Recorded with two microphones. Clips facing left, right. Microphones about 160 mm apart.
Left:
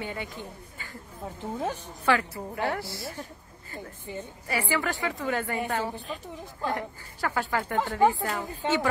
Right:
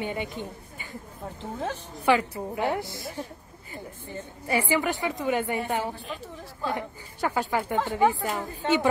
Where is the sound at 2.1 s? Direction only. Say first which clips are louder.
Right 3 dB; 20° right (ahead or behind).